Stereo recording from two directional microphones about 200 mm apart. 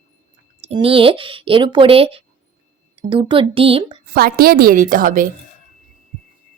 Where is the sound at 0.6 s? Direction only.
30° right (ahead or behind).